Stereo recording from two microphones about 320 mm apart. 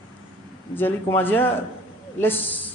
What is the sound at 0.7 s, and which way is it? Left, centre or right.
Speech, centre.